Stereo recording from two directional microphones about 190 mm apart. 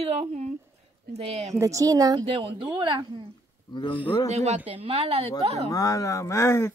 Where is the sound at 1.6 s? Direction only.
15° right (ahead or behind).